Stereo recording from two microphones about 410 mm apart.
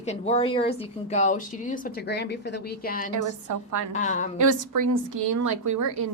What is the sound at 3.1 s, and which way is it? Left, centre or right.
Speech, right.